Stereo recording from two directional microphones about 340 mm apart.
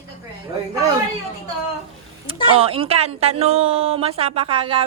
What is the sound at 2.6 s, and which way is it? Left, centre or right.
A woman's voice, centre.